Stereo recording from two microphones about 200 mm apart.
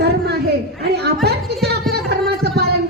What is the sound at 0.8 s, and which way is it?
Speech, 55° right (ahead or behind).